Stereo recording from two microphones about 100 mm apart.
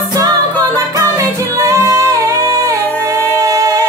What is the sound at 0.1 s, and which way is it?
Music, 40° right (ahead or behind).